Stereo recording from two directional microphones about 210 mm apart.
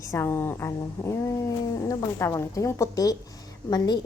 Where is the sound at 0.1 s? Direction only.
10° left (ahead or behind).